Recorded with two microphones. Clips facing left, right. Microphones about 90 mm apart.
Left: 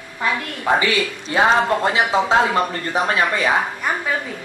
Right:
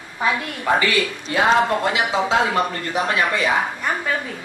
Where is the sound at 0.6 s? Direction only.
20° left (ahead or behind); by 3.5 s 35° left (ahead or behind).